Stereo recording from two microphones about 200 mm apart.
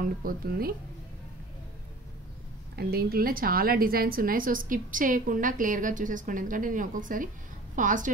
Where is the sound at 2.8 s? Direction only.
50° right (ahead or behind).